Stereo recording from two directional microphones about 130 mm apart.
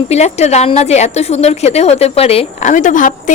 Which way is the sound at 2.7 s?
75° left (ahead or behind).